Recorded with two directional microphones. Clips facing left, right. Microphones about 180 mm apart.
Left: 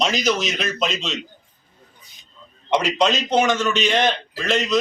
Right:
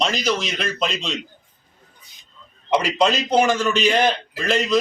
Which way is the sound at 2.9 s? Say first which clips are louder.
Right 2 dB; 5° right (ahead or behind).